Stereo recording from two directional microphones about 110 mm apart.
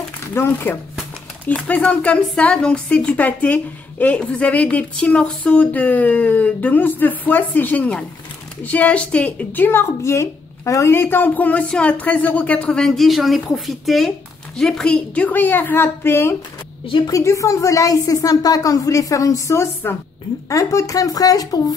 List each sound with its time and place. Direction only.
0.3 s a woman's voice: 20° left (ahead or behind)
16.8 s a woman's voice: 50° left (ahead or behind)
17.1 s a woman's voice: 30° left (ahead or behind)